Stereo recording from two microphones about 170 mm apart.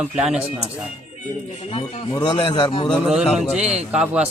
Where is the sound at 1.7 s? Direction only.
35° left (ahead or behind).